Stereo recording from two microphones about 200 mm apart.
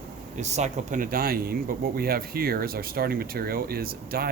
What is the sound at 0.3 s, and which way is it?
Speech, 35° right (ahead or behind).